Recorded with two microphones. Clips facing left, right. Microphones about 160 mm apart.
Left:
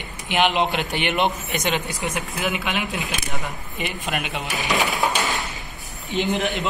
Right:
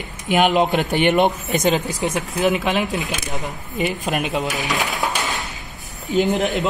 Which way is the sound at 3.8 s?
40° right (ahead or behind).